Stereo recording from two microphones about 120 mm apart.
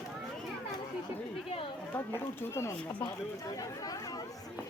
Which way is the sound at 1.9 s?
15° left (ahead or behind).